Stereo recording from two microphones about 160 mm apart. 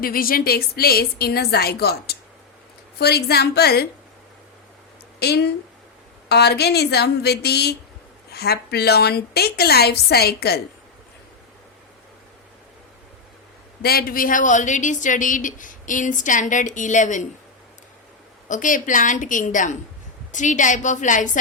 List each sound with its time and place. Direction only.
0.0 s a woman's voice: 65° left (ahead or behind); by 3.8 s 85° left
5.2 s a woman's voice: 90° left
13.8 s speech: 70° left (ahead or behind); by 17.2 s 50° left (ahead or behind)
18.4 s speech: 55° left (ahead or behind)